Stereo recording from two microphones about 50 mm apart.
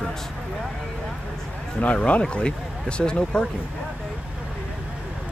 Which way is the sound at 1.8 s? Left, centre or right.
Left.